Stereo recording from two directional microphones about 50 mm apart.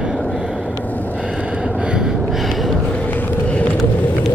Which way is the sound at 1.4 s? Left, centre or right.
Centre.